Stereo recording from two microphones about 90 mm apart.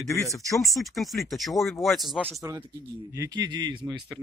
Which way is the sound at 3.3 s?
50° right (ahead or behind).